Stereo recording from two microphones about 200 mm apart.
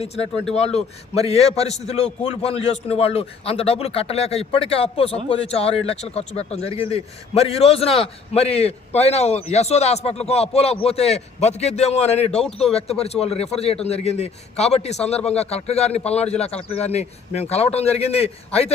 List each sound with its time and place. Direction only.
0.0 s a man's voice: 30° left (ahead or behind)
12.3 s speech: 5° left (ahead or behind)
12.7 s speech: 30° left (ahead or behind)